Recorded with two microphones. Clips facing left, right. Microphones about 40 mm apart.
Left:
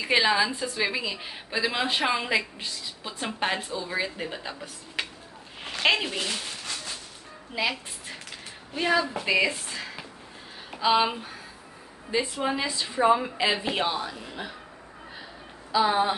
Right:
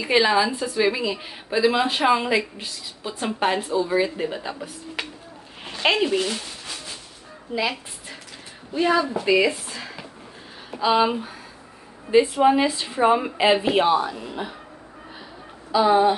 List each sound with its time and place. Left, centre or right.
0.0 s a woman's voice: centre
7.5 s a woman's voice: centre
12.1 s speech: centre
12.4 s a woman's voice: right
15.7 s a woman's voice: centre